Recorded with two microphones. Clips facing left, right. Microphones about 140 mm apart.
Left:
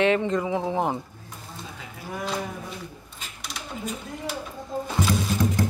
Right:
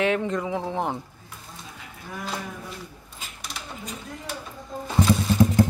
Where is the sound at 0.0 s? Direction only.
Centre (ahead or behind).